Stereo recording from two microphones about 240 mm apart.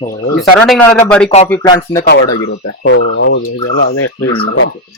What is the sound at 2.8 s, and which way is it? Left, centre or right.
Fowl, left.